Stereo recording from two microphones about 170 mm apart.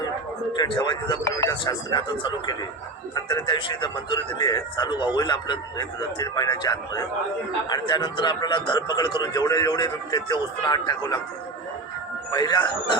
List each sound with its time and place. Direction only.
0.5 s speech: 25° left (ahead or behind)
12.3 s speech: 25° left (ahead or behind)